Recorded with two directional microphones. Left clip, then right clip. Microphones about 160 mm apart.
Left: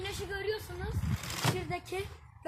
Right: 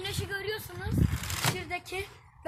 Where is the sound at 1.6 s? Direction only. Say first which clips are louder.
Right 2 dB; 20° left (ahead or behind).